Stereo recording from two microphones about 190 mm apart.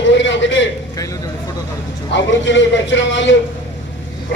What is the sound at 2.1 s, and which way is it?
A man's voice, 70° left (ahead or behind).